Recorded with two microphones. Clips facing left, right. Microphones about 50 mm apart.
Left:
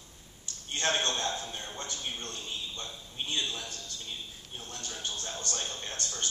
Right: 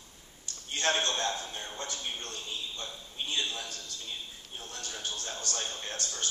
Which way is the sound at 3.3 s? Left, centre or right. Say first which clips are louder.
Even; right.